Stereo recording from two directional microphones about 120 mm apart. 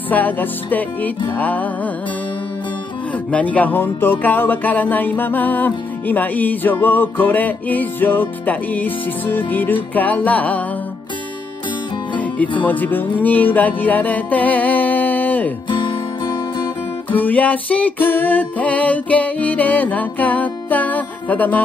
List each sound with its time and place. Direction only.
0.1 s music: 15° left (ahead or behind)
3.3 s music: 10° left (ahead or behind)
12.6 s music: 15° left (ahead or behind)
15.8 s music: 40° left (ahead or behind)
17.1 s music: 15° left (ahead or behind)